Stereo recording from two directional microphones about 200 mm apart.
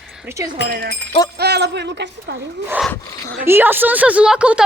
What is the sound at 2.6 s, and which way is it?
A woman's voice, 5° right (ahead or behind).